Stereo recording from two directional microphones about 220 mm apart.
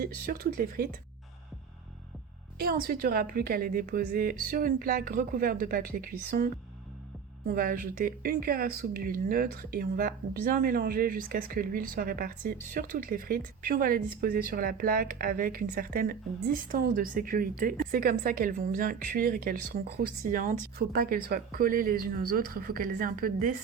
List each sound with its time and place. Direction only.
0.0 s a woman's voice: 40° right (ahead or behind)
2.6 s a woman's voice: 40° right (ahead or behind)